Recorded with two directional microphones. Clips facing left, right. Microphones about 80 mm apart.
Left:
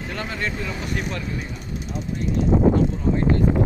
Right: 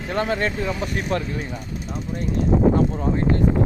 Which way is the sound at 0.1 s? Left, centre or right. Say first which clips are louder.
Right 7 dB; right.